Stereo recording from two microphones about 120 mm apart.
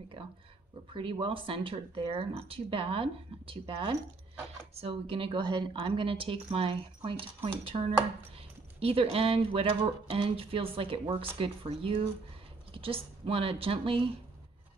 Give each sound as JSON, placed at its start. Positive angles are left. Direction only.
{"t": 0.9, "sound": "speech", "side_deg": -45}